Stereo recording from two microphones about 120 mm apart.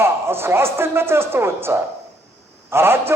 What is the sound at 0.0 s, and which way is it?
A man's voice, 20° right (ahead or behind).